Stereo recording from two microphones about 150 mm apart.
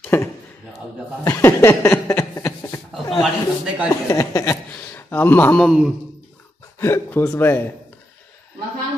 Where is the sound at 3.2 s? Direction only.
Centre (ahead or behind).